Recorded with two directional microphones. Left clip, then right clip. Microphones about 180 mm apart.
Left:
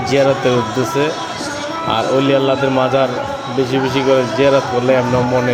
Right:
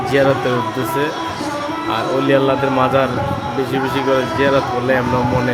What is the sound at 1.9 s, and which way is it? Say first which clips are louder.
Speech: left 2 dB; 15° left (ahead or behind).